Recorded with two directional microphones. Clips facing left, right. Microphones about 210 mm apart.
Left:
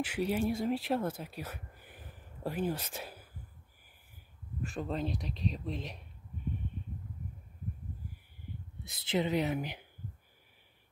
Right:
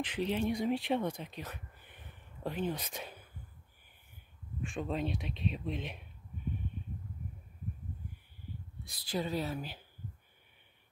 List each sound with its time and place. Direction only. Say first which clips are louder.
0.0 s speech: left 1 dB; 10° left (ahead or behind)
4.6 s speech: even; centre (ahead or behind)
8.8 s speech: left 4 dB; 25° left (ahead or behind)